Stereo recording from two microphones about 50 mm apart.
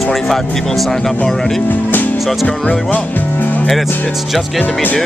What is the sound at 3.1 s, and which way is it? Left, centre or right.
Music, left.